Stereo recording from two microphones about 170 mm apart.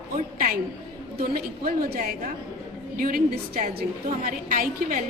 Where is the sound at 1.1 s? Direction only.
65° right (ahead or behind).